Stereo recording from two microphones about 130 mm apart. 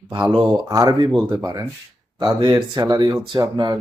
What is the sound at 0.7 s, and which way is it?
Speech, 30° right (ahead or behind).